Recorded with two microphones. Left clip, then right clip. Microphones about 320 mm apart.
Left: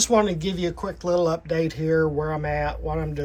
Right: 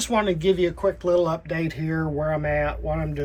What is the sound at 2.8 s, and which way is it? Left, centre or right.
Speech, centre.